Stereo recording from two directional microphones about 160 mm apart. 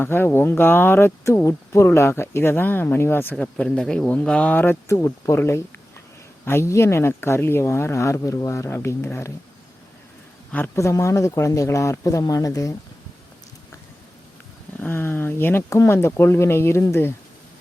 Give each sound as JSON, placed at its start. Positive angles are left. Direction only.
{"t": 0.0, "sound": "speech", "side_deg": 15}
{"t": 10.5, "sound": "speech", "side_deg": 15}
{"t": 14.8, "sound": "speech", "side_deg": 15}